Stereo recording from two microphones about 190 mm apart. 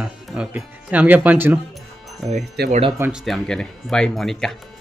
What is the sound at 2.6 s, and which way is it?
Speech, 60° right (ahead or behind).